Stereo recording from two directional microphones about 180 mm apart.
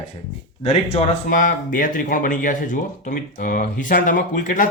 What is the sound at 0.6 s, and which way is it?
Speech, 35° left (ahead or behind).